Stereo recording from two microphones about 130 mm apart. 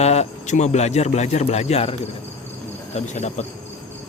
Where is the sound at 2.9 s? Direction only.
60° left (ahead or behind).